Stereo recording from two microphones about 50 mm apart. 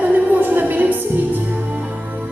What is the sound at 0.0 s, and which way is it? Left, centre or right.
Music, right.